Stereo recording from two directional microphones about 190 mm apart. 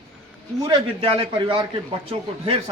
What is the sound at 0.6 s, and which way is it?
A man's voice, 25° right (ahead or behind).